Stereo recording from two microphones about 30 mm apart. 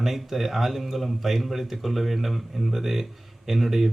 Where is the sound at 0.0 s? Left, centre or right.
Centre.